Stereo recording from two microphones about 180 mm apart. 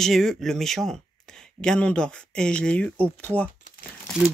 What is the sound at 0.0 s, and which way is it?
Speech, centre (ahead or behind).